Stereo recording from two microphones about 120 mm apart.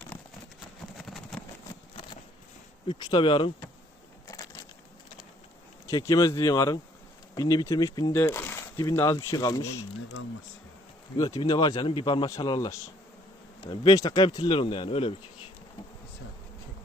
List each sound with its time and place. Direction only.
0.9 s a sound: centre (ahead or behind)
2.8 s speech: 40° left (ahead or behind)
4.3 s crushing: 25° left (ahead or behind)
5.8 s speech: 25° left (ahead or behind)
8.1 s speech: 20° left (ahead or behind)
11.2 s speech: 30° left (ahead or behind)
13.9 s speech: 30° left (ahead or behind); by 15.1 s 50° left (ahead or behind)